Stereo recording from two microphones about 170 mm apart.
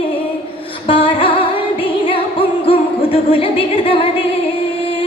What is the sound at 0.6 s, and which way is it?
Music, 30° left (ahead or behind).